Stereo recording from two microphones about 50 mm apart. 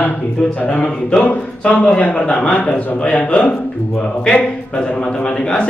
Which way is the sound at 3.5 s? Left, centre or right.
Centre.